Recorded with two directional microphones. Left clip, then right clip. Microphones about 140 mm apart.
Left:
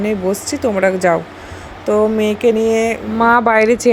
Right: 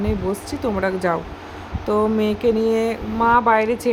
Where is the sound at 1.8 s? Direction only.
10° left (ahead or behind).